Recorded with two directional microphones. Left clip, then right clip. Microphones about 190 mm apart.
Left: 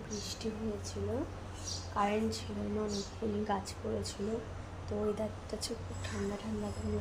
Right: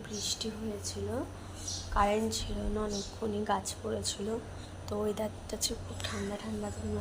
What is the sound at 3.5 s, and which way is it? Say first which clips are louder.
Speech: right 5 dB; 5° right (ahead or behind).